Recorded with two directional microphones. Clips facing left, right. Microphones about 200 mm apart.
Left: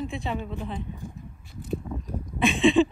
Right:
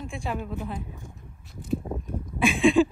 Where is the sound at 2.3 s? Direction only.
Centre (ahead or behind).